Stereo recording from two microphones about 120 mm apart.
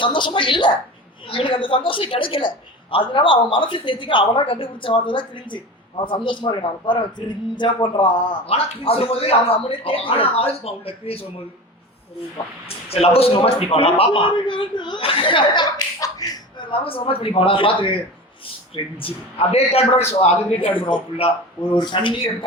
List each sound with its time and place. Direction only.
0.0 s a man's voice: 40° left (ahead or behind)
8.4 s a man's voice: 55° left (ahead or behind)
12.6 s a man's voice: 55° left (ahead or behind)
20.7 s a man's voice: 45° left (ahead or behind)